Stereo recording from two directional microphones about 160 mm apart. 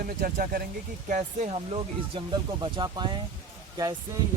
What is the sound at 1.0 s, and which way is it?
Speech, 50° right (ahead or behind).